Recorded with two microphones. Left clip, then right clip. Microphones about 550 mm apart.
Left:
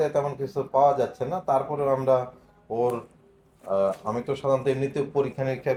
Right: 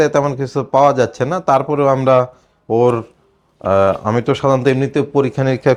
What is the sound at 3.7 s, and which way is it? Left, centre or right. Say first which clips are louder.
Speech: right 11 dB; right.